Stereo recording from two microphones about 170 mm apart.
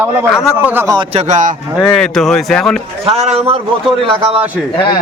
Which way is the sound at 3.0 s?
35° right (ahead or behind).